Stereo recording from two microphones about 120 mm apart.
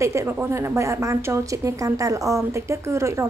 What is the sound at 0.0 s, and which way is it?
A woman's voice, 25° right (ahead or behind).